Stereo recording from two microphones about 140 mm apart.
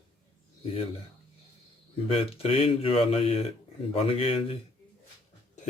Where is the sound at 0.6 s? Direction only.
45° left (ahead or behind).